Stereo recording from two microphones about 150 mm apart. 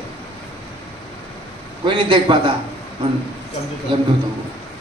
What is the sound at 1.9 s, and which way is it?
Speech, 35° right (ahead or behind).